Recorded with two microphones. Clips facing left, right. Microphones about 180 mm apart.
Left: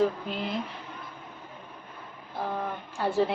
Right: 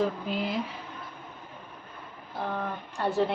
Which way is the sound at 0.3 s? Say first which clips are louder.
Right 2 dB; 5° right (ahead or behind).